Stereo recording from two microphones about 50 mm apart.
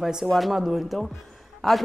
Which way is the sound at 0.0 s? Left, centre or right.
Centre.